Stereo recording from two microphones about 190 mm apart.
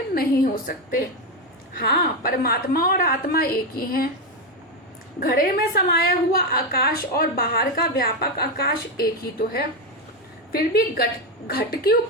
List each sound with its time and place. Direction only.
0.1 s a woman's voice: 50° left (ahead or behind)
5.2 s a woman's voice: 50° left (ahead or behind)